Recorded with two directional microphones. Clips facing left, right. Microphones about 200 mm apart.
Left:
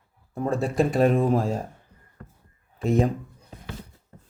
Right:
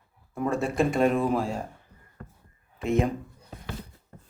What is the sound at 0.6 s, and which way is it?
Speech, 35° left (ahead or behind).